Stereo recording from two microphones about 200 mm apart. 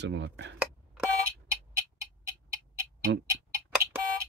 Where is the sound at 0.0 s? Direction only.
65° right (ahead or behind).